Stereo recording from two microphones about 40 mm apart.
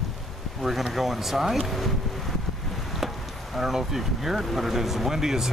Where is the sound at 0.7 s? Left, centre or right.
Centre.